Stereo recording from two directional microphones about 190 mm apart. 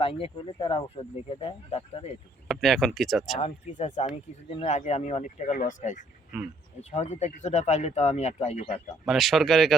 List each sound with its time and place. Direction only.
0.0 s speech: 30° left (ahead or behind)
2.5 s speech: centre (ahead or behind)
3.4 s speech: 40° left (ahead or behind)
6.3 s speech: 5° right (ahead or behind)
6.9 s speech: 35° left (ahead or behind)
9.0 s speech: centre (ahead or behind)